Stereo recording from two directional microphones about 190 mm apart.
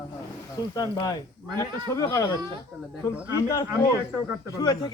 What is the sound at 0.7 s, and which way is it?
A man's voice, 20° left (ahead or behind).